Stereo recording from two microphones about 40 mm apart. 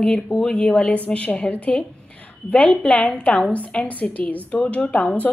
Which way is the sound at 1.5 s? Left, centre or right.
Left.